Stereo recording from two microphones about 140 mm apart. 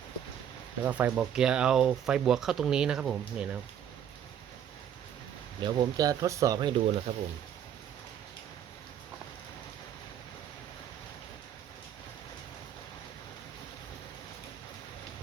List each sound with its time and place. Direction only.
0.9 s speech: 10° right (ahead or behind)
5.5 s speech: 30° right (ahead or behind)
7.1 s speech: 50° right (ahead or behind)